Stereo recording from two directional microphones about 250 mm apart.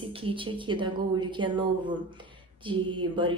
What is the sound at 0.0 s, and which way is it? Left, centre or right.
Speech, right.